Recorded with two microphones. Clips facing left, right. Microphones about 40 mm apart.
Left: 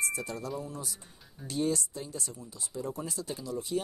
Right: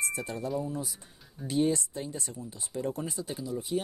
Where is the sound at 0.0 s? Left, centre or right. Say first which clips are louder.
Right 1 dB; right.